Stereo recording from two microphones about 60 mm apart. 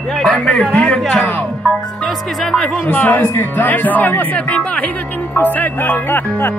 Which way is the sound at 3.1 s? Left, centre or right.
Left.